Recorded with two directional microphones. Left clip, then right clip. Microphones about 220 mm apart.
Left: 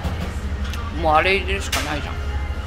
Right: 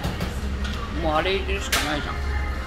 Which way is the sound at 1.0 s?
55° left (ahead or behind).